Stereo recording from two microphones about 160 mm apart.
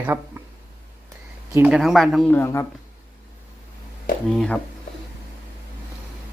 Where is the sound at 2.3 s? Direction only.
15° left (ahead or behind).